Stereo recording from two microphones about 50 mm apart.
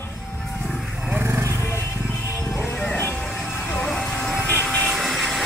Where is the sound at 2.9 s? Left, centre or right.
Left.